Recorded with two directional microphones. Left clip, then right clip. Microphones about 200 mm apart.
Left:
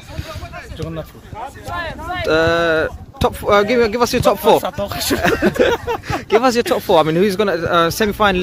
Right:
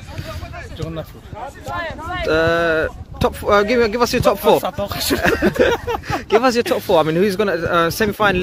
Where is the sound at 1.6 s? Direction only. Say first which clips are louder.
Even; 50° left (ahead or behind).